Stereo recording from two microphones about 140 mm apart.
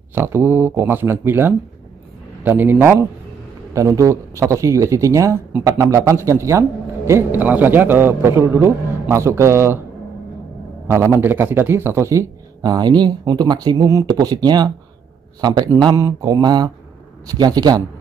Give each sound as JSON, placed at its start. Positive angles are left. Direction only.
{"t": 0.1, "sound": "a man's voice", "side_deg": -15}
{"t": 10.9, "sound": "a man's voice", "side_deg": -20}